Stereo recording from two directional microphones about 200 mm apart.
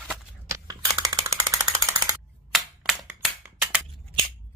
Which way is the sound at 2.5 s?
5° right (ahead or behind).